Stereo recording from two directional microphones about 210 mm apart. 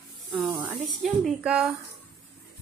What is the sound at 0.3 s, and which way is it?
Spray, 5° right (ahead or behind).